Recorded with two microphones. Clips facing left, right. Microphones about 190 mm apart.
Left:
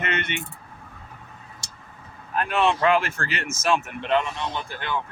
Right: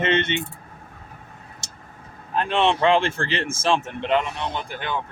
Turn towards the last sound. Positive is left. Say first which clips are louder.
# right 2 dB
turn(degrees=-15)  # may be behind; listen again after turning